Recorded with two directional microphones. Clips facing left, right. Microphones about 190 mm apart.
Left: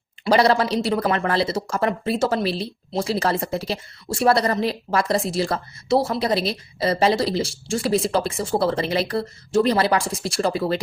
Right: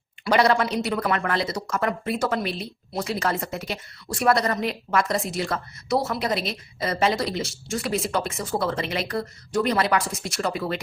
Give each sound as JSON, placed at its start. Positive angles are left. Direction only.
{"t": 0.3, "sound": "speech", "side_deg": 35}